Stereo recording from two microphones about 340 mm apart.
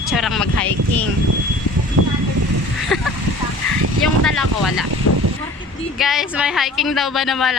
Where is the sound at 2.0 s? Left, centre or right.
Right.